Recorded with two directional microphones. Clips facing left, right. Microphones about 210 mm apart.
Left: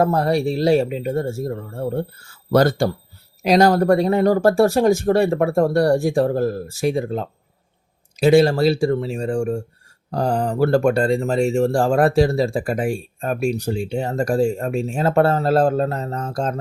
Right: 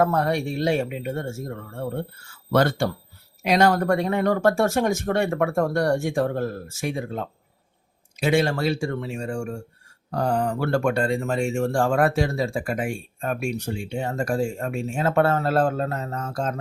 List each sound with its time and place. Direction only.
0.0 s speech: 35° left (ahead or behind)